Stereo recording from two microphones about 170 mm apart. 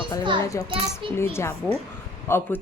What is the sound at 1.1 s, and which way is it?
Speech, 15° left (ahead or behind).